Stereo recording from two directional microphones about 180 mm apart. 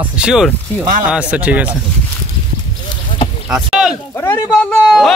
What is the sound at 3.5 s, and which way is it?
Rowboat, 5° right (ahead or behind).